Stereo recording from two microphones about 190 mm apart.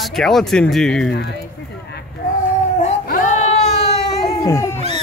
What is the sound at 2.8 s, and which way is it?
Cat, 40° left (ahead or behind).